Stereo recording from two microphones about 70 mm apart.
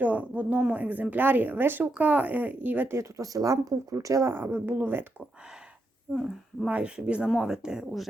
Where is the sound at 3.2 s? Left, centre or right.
Right.